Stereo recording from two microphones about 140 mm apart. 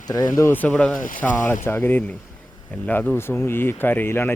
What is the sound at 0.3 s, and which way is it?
Speech, 15° left (ahead or behind).